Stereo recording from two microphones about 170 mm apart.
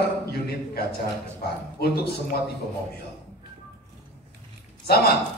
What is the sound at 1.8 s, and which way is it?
Speech, 70° left (ahead or behind).